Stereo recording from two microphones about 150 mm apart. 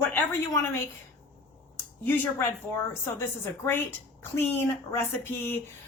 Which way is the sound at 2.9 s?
15° left (ahead or behind).